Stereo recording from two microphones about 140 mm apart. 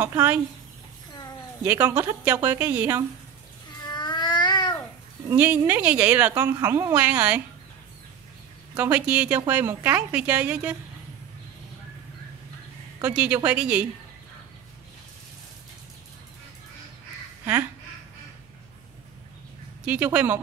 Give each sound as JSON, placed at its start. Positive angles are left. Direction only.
{"t": 0.0, "sound": "a woman's voice", "side_deg": -15}
{"t": 1.6, "sound": "a woman's voice", "side_deg": -15}
{"t": 3.8, "sound": "a sound", "side_deg": 30}
{"t": 5.3, "sound": "a woman's voice", "side_deg": -15}
{"t": 6.4, "sound": "a woman's voice", "side_deg": -25}
{"t": 7.0, "sound": "a woman's voice", "side_deg": -10}
{"t": 8.7, "sound": "a woman's voice", "side_deg": -10}
{"t": 13.0, "sound": "a woman's voice", "side_deg": -10}
{"t": 19.8, "sound": "a woman's voice", "side_deg": -10}